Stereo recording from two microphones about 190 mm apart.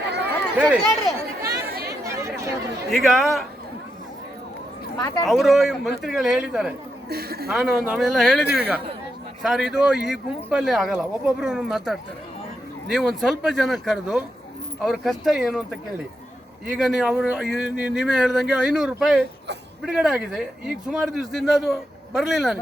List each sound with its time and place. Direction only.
0.6 s speech: 5° right (ahead or behind)
1.5 s chatter: 55° right (ahead or behind)
2.0 s chatter: 15° right (ahead or behind)
2.9 s speech: centre (ahead or behind)
4.9 s speech: 20° left (ahead or behind)
5.2 s speech: centre (ahead or behind)
7.1 s a woman's voice: 55° right (ahead or behind)
7.5 s speech: centre (ahead or behind)
16.7 s speech: centre (ahead or behind)